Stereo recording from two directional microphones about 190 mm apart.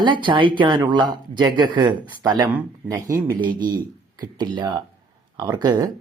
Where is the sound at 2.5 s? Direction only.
10° right (ahead or behind).